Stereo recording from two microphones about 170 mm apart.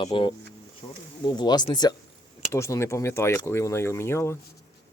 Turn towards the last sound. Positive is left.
turn(degrees=15)  # may be behind; listen again after turning